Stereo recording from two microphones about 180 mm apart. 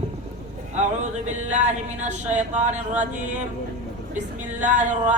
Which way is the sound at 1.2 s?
40° right (ahead or behind).